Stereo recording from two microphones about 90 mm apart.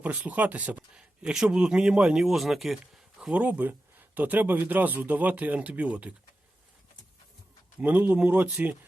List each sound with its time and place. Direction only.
0.0 s speech: 15° right (ahead or behind)
3.3 s speech: 15° right (ahead or behind)
7.8 s speech: 15° right (ahead or behind)